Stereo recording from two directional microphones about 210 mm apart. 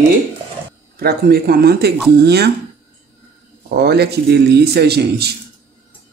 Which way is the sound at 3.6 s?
50° right (ahead or behind).